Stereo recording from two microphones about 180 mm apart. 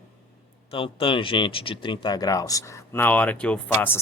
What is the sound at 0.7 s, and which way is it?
Speech, 30° left (ahead or behind).